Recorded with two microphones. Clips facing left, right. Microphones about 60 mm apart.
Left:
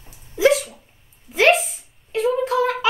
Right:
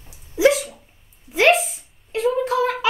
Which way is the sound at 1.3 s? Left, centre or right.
Centre.